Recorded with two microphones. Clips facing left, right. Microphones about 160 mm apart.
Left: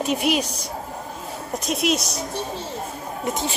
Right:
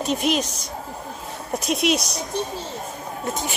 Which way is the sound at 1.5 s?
Centre (ahead or behind).